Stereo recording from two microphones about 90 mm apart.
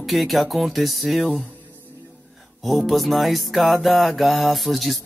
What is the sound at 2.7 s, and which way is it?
Music, centre (ahead or behind).